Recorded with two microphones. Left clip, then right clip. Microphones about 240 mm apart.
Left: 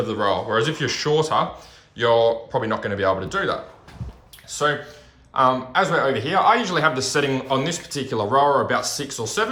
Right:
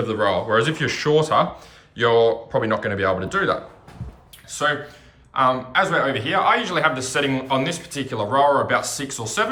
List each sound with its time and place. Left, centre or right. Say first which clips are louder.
0.0 s speech: right 1 dB; centre
4.4 s speech: even; centre